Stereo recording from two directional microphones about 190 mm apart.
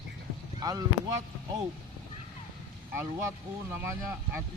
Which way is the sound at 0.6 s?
20° right (ahead or behind).